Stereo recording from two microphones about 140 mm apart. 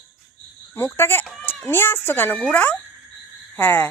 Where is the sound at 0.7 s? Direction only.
15° left (ahead or behind).